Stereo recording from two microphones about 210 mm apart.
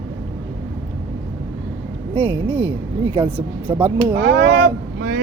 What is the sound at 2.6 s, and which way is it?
Speech, 25° right (ahead or behind).